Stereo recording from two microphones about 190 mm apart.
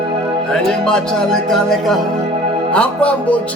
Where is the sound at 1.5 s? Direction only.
Centre (ahead or behind).